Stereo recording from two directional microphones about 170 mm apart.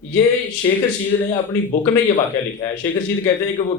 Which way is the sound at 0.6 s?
30° left (ahead or behind).